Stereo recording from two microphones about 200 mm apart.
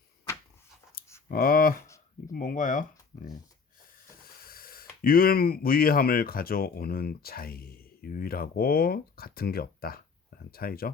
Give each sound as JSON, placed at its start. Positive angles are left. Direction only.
{"t": 1.3, "sound": "speech", "side_deg": 45}
{"t": 4.4, "sound": "speech", "side_deg": 45}